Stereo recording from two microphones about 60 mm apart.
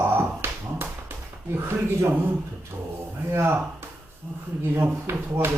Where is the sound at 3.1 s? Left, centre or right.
Right.